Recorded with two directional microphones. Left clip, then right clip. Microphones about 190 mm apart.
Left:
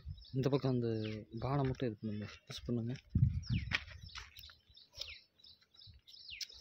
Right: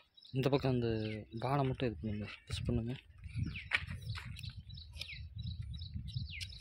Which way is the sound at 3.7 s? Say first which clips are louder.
Right 3 dB; 45° right (ahead or behind).